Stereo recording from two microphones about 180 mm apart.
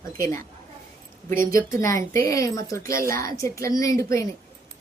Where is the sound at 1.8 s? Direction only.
15° left (ahead or behind).